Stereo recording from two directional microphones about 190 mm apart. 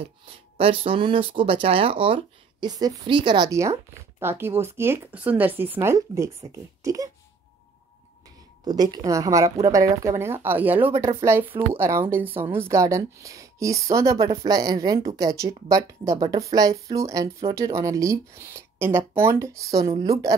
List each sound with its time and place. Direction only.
0.6 s speech: 30° right (ahead or behind)
8.6 s speech: 20° right (ahead or behind)